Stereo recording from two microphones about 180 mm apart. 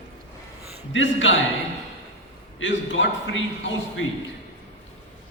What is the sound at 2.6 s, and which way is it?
A man's voice, 90° left.